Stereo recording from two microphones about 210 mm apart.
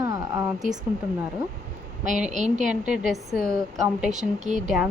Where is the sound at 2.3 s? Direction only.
35° right (ahead or behind).